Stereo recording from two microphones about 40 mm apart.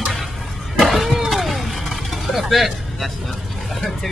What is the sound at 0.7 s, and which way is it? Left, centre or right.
Vehicle, centre.